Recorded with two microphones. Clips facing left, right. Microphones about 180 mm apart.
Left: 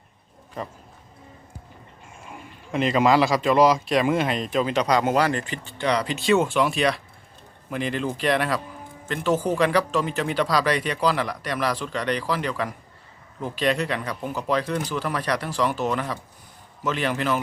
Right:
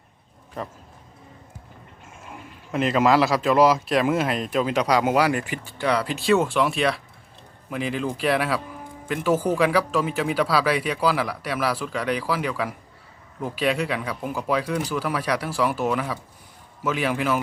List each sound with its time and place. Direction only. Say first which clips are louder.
2.3 s a man's voice: even; centre (ahead or behind)